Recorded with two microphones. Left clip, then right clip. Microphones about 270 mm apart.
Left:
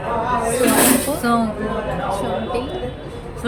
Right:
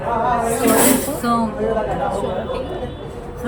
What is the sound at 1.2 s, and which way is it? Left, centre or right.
Speech, centre.